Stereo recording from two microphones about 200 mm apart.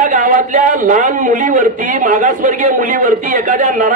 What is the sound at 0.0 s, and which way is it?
A man's voice, 40° right (ahead or behind).